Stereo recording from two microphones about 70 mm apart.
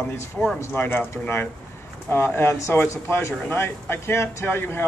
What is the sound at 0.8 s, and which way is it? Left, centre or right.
A man's voice, left.